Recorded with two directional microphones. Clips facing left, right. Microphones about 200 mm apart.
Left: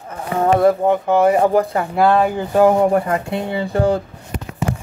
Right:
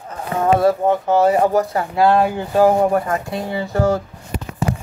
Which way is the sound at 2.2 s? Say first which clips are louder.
Left 1 dB; 15° left (ahead or behind).